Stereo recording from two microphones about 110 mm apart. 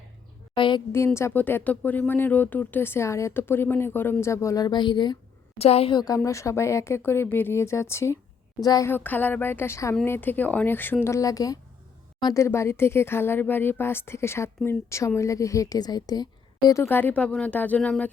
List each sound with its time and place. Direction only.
0.5 s a sound: 50° left (ahead or behind)
0.9 s speech: 25° left (ahead or behind); by 5.1 s 40° left (ahead or behind)
5.5 s a woman's voice: 65° left (ahead or behind)
5.9 s speech: 35° left (ahead or behind)
8.6 s speech: 35° left (ahead or behind)
8.9 s speech: 15° left (ahead or behind)
11.0 s speech: 30° left (ahead or behind)
16.8 s speech: 20° left (ahead or behind)